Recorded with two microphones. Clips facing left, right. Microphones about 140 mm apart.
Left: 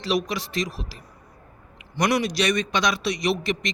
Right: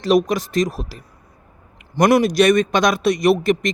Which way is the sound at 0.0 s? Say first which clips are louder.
Right 9 dB; 50° right (ahead or behind).